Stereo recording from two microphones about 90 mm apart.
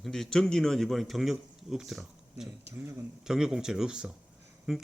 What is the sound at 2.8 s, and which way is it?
Speech, 25° right (ahead or behind).